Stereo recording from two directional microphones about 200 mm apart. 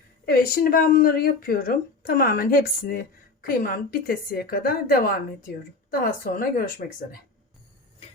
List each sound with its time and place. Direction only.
0.3 s speech: 45° left (ahead or behind)